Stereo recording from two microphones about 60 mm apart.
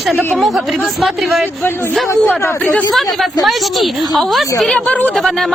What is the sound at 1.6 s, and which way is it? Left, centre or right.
Speech, left.